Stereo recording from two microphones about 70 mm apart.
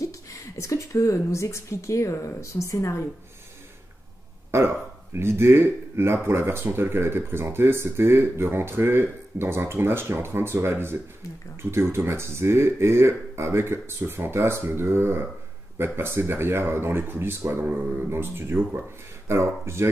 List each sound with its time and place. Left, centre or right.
0.6 s speech: left
4.5 s speech: right